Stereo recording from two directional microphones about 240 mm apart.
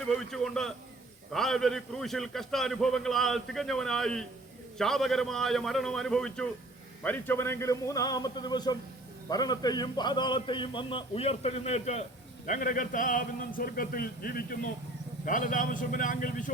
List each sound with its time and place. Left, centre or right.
0.3 s a man's voice: centre; by 16.5 s left